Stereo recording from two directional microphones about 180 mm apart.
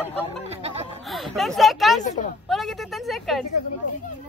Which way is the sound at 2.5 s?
Centre (ahead or behind).